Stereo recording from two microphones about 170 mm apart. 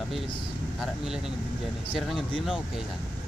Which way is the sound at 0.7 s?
5° right (ahead or behind).